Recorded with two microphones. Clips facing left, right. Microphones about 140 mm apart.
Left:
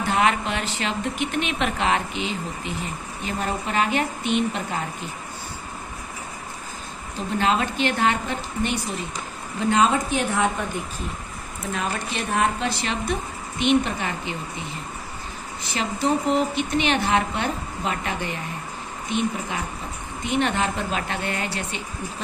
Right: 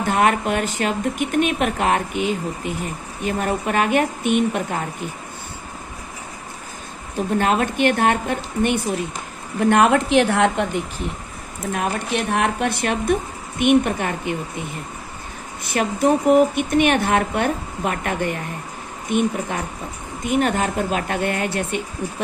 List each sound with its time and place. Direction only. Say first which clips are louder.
0.0 s speech: right 3 dB; 50° right (ahead or behind)
7.2 s a woman's voice: right 4 dB; 50° right (ahead or behind); by 10.7 s 80° right
11.7 s speech: right 5 dB; 60° right (ahead or behind)
15.6 s speech: right 6 dB; 55° right (ahead or behind)